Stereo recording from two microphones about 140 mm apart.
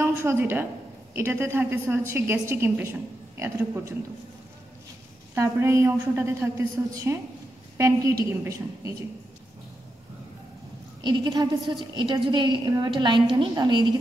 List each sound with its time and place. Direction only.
0.0 s a woman's voice: 15° right (ahead or behind)
5.3 s a woman's voice: 20° right (ahead or behind)
11.1 s a woman's voice: 30° right (ahead or behind)